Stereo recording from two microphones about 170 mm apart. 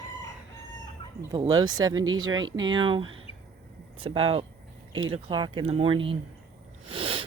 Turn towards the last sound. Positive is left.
turn(degrees=-30)  # may be behind; listen again after turning